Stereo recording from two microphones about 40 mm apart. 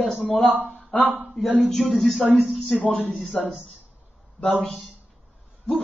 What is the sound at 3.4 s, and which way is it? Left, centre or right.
Speech, centre.